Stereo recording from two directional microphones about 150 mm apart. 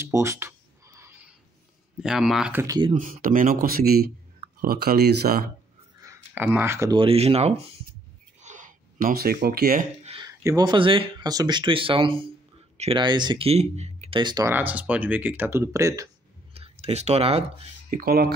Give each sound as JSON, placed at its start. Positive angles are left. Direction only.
{"t": 0.0, "sound": "a sound", "side_deg": -20}
{"t": 2.0, "sound": "speech", "side_deg": 0}
{"t": 2.5, "sound": "speech", "side_deg": -25}
{"t": 2.9, "sound": "speech", "side_deg": -60}
{"t": 5.9, "sound": "a sound", "side_deg": -20}
{"t": 6.4, "sound": "speech", "side_deg": -15}
{"t": 6.9, "sound": "speech", "side_deg": -35}
{"t": 8.4, "sound": "a sound", "side_deg": -55}
{"t": 10.2, "sound": "speech", "side_deg": -25}
{"t": 14.2, "sound": "speech", "side_deg": -25}
{"t": 14.5, "sound": "speech", "side_deg": -10}
{"t": 16.5, "sound": "speech", "side_deg": -40}
{"t": 17.8, "sound": "speech", "side_deg": -80}